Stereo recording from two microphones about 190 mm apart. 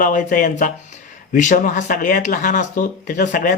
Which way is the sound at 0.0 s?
45° left (ahead or behind).